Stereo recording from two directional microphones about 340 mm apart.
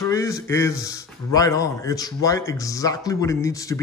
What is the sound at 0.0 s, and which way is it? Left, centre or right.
A man's voice, centre.